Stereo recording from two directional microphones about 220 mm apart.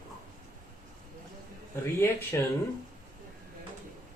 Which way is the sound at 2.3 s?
15° left (ahead or behind).